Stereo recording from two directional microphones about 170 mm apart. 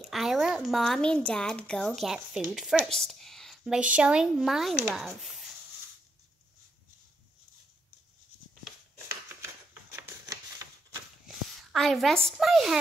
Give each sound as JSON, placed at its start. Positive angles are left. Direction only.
{"t": 0.0, "sound": "speech", "side_deg": 0}
{"t": 9.1, "sound": "a sound", "side_deg": -15}
{"t": 10.0, "sound": "typewriter", "side_deg": -20}
{"t": 11.2, "sound": "a woman's voice", "side_deg": 0}